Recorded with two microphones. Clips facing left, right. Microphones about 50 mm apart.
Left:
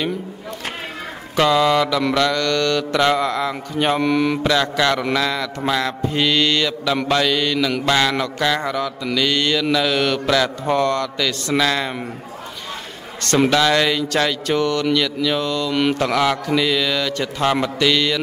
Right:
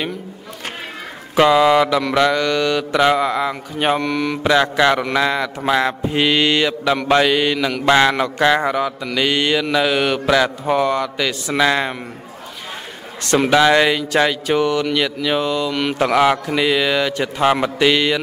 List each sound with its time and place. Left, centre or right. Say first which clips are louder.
1.3 s speech: right 3 dB; centre
4.0 s speech: left 3 dB; centre
4.4 s speech: right 3 dB; centre
13.5 s speech: right 7 dB; centre
15.7 s speech: left 2 dB; centre
16.0 s speech: right 3 dB; centre